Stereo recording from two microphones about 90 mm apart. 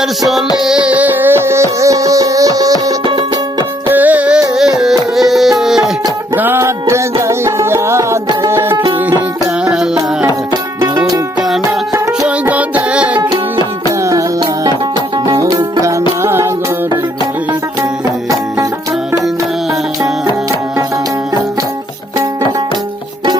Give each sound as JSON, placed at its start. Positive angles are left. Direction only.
{"t": 0.0, "sound": "music", "side_deg": 0}
{"t": 3.8, "sound": "music", "side_deg": -20}
{"t": 4.8, "sound": "music", "side_deg": -5}
{"t": 6.3, "sound": "music", "side_deg": -25}
{"t": 9.6, "sound": "music", "side_deg": -5}
{"t": 10.5, "sound": "music", "side_deg": -45}
{"t": 11.3, "sound": "music", "side_deg": -5}
{"t": 12.5, "sound": "music", "side_deg": -15}
{"t": 14.0, "sound": "music", "side_deg": -40}
{"t": 15.4, "sound": "music", "side_deg": -50}
{"t": 15.8, "sound": "music", "side_deg": -35}